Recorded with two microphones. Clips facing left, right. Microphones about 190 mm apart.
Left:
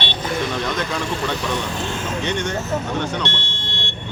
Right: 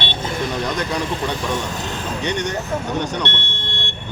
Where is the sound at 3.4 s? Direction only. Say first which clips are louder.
Right 1 dB; 55° right (ahead or behind).